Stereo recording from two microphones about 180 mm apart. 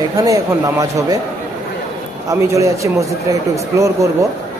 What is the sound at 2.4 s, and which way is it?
A man's voice, 15° right (ahead or behind).